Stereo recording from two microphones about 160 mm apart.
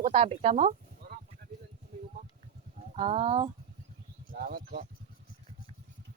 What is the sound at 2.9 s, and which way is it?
Speech, 40° right (ahead or behind).